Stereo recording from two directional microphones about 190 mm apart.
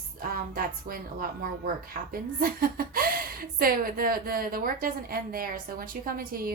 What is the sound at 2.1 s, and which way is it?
A woman's voice, 50° right (ahead or behind).